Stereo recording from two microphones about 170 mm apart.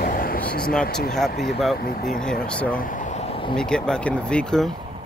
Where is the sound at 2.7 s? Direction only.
50° left (ahead or behind); by 3.6 s 30° left (ahead or behind).